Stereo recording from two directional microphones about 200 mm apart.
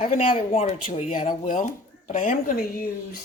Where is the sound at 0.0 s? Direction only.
40° left (ahead or behind).